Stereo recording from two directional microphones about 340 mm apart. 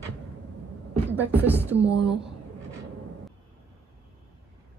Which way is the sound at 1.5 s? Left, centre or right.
Centre.